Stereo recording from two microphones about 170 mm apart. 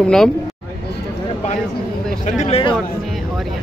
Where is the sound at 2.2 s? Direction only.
45° left (ahead or behind).